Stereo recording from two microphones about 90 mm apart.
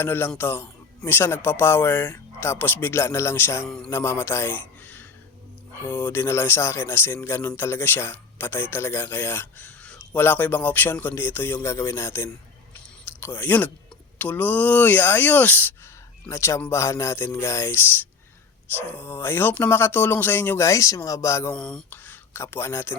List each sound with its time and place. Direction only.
0.0 s a man's voice: 25° left (ahead or behind)
18.8 s speech: 20° right (ahead or behind)
19.0 s speech: 25° left (ahead or behind)
20.7 s speech: 35° left (ahead or behind)
21.5 s speech: 10° left (ahead or behind)
21.8 s speech: 20° left (ahead or behind)